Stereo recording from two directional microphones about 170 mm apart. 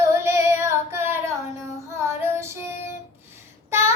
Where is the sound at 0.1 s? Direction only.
15° right (ahead or behind).